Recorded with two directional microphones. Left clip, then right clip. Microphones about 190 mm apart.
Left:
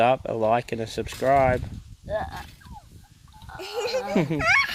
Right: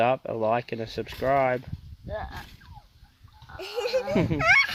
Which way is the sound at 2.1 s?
55° left (ahead or behind).